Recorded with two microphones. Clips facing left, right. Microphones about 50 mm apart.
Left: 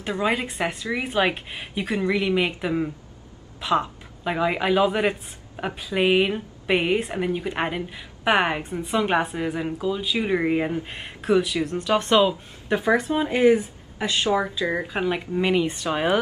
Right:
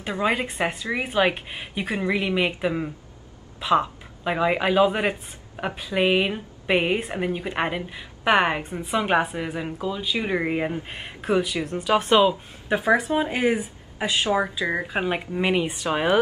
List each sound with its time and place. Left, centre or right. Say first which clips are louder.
0.0 s speech: even; centre
14.8 s speech: even; right; by 16.1 s centre